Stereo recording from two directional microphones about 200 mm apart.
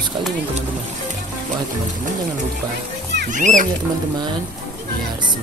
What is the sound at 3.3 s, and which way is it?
Speech, 40° right (ahead or behind).